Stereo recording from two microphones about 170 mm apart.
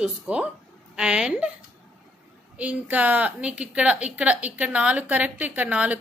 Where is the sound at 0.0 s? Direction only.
5° right (ahead or behind).